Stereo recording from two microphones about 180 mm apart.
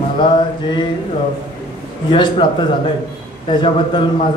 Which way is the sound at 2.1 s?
30° left (ahead or behind).